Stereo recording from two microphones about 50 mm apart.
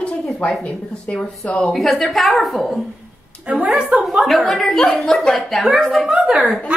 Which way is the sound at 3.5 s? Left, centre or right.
Right.